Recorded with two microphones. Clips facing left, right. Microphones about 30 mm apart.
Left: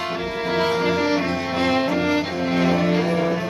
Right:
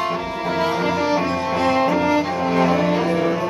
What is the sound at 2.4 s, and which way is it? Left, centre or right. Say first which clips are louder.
Cello: right 1 dB; centre.